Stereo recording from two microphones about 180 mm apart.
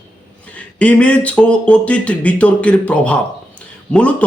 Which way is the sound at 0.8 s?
5° left (ahead or behind).